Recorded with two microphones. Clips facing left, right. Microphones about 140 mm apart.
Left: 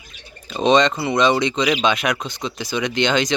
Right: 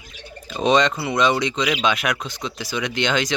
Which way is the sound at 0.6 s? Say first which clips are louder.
Left 2 dB; 5° right (ahead or behind).